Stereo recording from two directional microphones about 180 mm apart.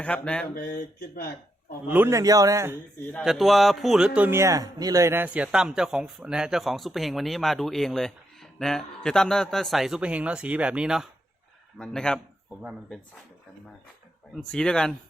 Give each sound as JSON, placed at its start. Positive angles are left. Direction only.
{"t": 0.0, "sound": "speech", "side_deg": 5}
{"t": 0.5, "sound": "speech", "side_deg": 50}
{"t": 1.9, "sound": "a man's voice", "side_deg": -15}
{"t": 3.1, "sound": "speech", "side_deg": 0}
{"t": 14.5, "sound": "speech", "side_deg": 5}